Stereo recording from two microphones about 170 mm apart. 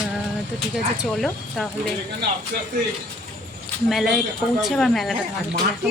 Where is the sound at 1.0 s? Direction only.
Centre (ahead or behind).